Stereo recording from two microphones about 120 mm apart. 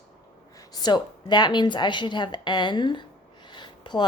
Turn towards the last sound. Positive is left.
turn(degrees=40)  # may be behind; listen again after turning